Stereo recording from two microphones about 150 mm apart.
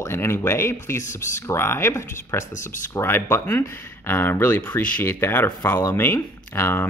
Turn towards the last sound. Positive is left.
turn(degrees=15)  # may be behind; listen again after turning